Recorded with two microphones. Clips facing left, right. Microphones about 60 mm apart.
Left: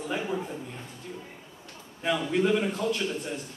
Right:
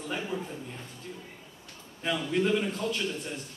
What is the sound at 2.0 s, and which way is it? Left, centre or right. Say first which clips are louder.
Speech: left 2 dB; centre.